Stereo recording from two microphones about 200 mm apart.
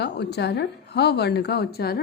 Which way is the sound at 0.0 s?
55° left (ahead or behind).